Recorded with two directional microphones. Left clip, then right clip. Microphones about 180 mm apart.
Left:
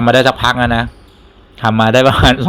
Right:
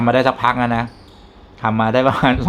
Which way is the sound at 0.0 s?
30° left (ahead or behind).